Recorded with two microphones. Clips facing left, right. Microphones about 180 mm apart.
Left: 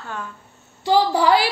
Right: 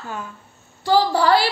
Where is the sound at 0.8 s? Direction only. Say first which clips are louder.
Even; 15° left (ahead or behind).